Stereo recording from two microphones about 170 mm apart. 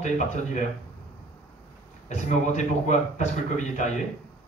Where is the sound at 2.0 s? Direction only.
45° left (ahead or behind).